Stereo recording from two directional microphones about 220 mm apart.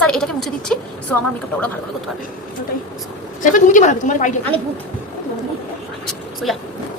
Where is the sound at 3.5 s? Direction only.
35° left (ahead or behind).